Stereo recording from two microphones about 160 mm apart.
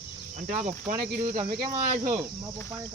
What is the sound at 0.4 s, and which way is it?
Speech, 55° right (ahead or behind).